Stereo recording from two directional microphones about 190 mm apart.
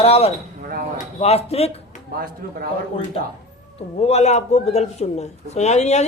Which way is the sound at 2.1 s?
50° right (ahead or behind).